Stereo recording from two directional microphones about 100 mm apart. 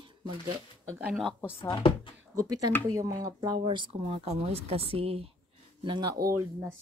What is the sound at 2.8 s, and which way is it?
Speech, 35° right (ahead or behind).